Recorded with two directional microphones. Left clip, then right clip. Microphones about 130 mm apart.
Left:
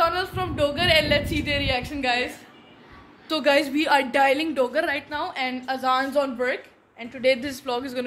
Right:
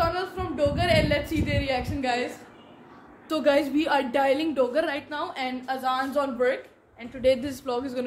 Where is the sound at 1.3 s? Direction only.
10° left (ahead or behind).